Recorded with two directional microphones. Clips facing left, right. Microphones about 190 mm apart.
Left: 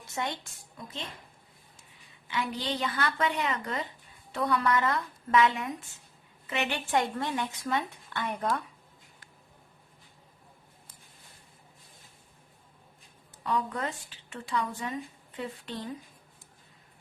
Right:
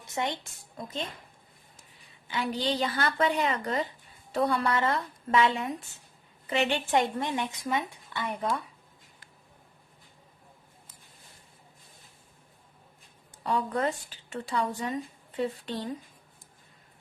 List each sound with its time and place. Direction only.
0.1 s a woman's voice: 20° right (ahead or behind)
2.2 s a woman's voice: 30° right (ahead or behind); by 7.9 s 15° right (ahead or behind)
8.1 s speech: centre (ahead or behind)
13.4 s a woman's voice: 40° right (ahead or behind)